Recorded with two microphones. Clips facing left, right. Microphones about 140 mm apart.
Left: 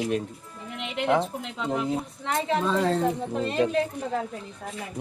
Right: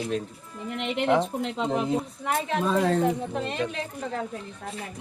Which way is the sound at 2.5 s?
5° right (ahead or behind).